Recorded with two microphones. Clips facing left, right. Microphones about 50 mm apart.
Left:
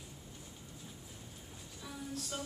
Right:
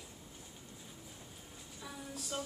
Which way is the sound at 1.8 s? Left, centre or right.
Centre.